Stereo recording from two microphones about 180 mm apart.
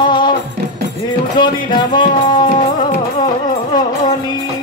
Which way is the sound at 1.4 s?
25° left (ahead or behind).